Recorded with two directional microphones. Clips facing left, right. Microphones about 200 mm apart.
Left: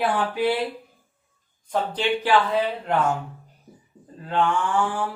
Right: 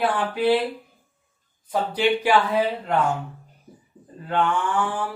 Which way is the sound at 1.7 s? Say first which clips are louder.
Right 2 dB; 10° right (ahead or behind).